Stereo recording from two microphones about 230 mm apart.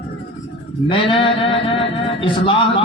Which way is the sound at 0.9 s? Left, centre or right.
Left.